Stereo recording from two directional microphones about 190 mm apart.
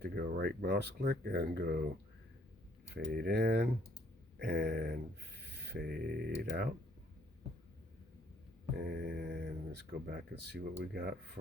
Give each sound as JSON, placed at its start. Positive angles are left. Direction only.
{"t": 0.0, "sound": "speech", "side_deg": -55}
{"t": 2.9, "sound": "speech", "side_deg": -55}
{"t": 4.4, "sound": "mantra", "side_deg": -50}
{"t": 5.4, "sound": "speech", "side_deg": -60}
{"t": 8.8, "sound": "mantra", "side_deg": -50}
{"t": 10.1, "sound": "speech", "side_deg": -55}